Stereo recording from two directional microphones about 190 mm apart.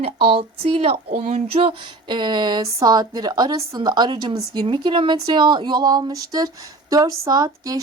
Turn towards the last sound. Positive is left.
turn(degrees=-20)  # may be behind; listen again after turning